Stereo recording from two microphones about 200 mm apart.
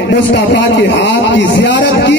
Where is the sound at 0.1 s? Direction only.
65° left (ahead or behind).